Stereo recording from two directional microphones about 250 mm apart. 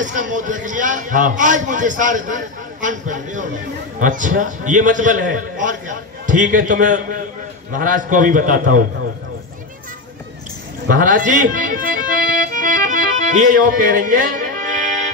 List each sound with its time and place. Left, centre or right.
0.0 s a man's voice: right
10.9 s a man's voice: right
12.4 s music: right